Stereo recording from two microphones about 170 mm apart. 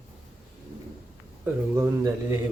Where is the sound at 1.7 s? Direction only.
20° right (ahead or behind).